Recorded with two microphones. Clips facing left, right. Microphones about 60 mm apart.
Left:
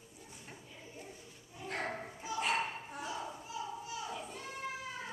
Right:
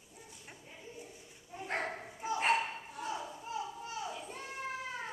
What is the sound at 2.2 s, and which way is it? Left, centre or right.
Dog, right.